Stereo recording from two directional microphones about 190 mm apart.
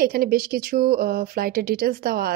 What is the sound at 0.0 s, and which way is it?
Speech, 50° right (ahead or behind).